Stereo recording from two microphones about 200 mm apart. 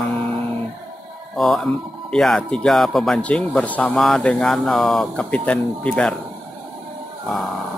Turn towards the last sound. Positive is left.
turn(degrees=0)  # may be behind; listen again after turning